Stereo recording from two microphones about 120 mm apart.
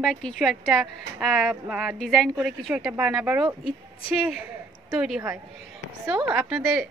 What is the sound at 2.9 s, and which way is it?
Speech, 10° right (ahead or behind).